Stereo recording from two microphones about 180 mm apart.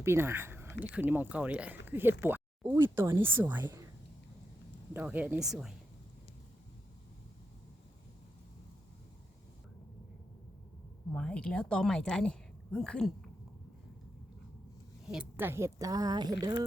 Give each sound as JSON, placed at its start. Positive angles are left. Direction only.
{"t": 0.0, "sound": "speech", "side_deg": -15}
{"t": 4.9, "sound": "speech", "side_deg": -10}
{"t": 11.1, "sound": "speech", "side_deg": 5}
{"t": 15.0, "sound": "speech", "side_deg": -5}